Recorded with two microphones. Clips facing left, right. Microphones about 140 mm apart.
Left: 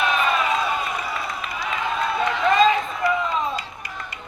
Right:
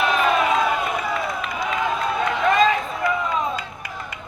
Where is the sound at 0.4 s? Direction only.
70° right (ahead or behind).